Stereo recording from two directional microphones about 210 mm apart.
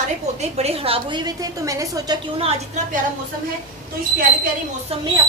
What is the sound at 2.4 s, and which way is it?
Speech, 35° right (ahead or behind).